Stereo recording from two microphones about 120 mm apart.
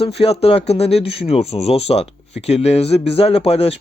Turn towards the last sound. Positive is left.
turn(degrees=55)  # may be behind; listen again after turning